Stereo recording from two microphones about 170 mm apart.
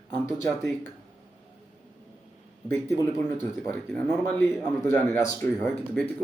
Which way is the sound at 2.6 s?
15° left (ahead or behind).